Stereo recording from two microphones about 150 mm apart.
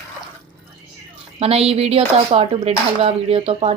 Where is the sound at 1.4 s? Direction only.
40° right (ahead or behind).